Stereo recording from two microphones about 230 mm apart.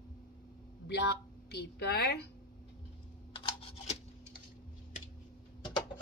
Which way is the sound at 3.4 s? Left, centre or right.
Left.